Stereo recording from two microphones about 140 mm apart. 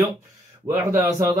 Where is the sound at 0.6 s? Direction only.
20° right (ahead or behind).